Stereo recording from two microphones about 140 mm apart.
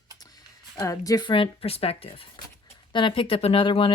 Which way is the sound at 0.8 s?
25° left (ahead or behind).